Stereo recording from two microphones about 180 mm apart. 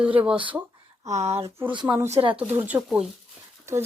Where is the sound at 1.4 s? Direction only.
15° right (ahead or behind).